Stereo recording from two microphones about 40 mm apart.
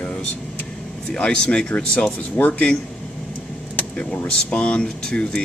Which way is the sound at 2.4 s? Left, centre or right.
Left.